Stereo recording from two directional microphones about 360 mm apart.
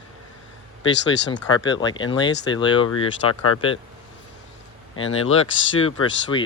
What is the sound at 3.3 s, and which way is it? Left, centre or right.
Speech, left.